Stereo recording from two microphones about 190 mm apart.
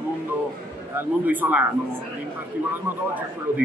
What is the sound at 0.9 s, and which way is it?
Speech, 10° right (ahead or behind).